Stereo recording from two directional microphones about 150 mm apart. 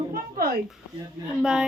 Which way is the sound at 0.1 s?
85° right.